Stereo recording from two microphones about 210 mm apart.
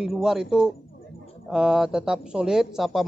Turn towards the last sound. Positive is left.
turn(degrees=0)  # may be behind; listen again after turning